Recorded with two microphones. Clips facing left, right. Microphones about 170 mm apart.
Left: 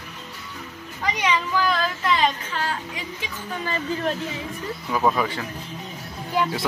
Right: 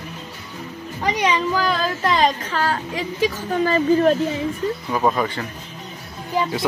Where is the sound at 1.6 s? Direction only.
40° right (ahead or behind).